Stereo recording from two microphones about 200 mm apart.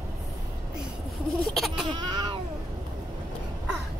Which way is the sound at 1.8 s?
20° right (ahead or behind).